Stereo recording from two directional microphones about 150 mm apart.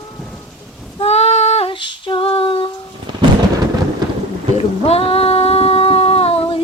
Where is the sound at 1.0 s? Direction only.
45° left (ahead or behind).